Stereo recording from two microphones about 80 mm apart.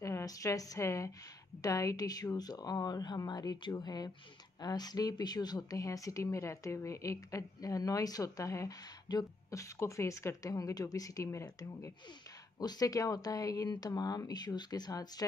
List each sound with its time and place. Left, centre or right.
0.0 s a woman's voice: left
9.1 s speech: left
9.5 s speech: left
12.5 s speech: left